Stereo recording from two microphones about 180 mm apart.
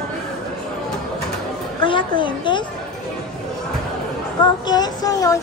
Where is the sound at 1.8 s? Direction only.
25° left (ahead or behind).